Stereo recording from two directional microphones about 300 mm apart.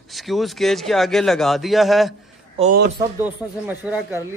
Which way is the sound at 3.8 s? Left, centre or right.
Centre.